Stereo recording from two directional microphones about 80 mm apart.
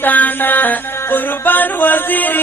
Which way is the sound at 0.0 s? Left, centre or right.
Left.